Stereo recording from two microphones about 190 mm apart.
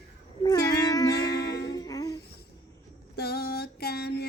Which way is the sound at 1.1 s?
60° left (ahead or behind).